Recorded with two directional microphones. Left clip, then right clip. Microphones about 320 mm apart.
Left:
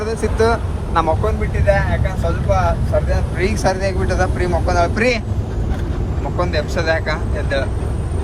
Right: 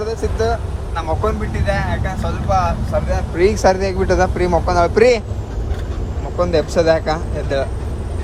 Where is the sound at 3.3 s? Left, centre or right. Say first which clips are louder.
Right 6 dB; centre.